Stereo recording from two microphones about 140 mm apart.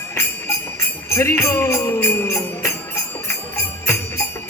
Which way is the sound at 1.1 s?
20° left (ahead or behind).